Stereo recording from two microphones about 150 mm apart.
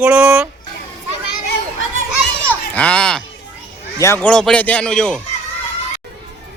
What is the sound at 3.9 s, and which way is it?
Speech, 20° left (ahead or behind).